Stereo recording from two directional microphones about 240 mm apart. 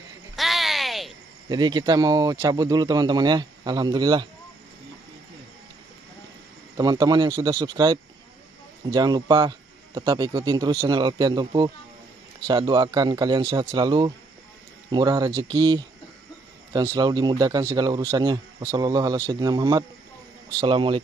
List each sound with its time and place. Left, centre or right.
0.4 s a sound: centre
1.5 s speech: centre
6.8 s speech: centre